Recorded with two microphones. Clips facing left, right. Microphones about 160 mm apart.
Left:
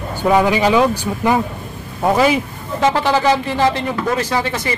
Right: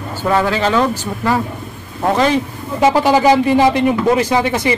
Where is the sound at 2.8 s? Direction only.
10° right (ahead or behind).